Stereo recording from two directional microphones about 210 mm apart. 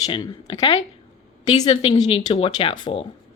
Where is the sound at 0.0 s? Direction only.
20° left (ahead or behind).